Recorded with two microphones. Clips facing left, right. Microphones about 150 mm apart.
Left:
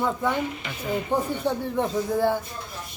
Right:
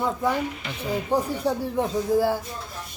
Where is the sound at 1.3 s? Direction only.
5° right (ahead or behind).